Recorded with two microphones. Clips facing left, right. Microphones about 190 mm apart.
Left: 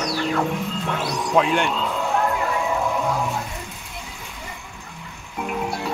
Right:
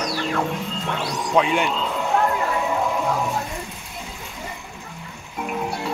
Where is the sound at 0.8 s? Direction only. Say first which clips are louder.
Right 1 dB; 5° left (ahead or behind).